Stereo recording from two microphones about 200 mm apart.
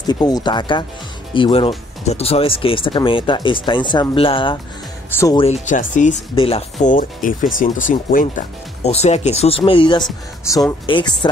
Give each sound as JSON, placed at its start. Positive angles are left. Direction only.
{"t": 0.0, "sound": "speech", "side_deg": 20}
{"t": 5.1, "sound": "speech", "side_deg": 15}
{"t": 5.4, "sound": "speech", "side_deg": 35}